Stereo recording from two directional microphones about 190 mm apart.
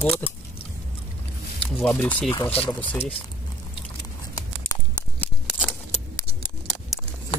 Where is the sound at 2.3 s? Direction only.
30° left (ahead or behind).